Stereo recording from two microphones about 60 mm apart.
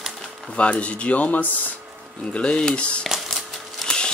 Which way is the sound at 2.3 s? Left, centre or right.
Centre.